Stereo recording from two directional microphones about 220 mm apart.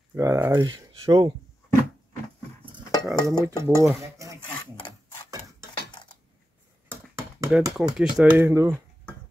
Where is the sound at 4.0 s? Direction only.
15° right (ahead or behind).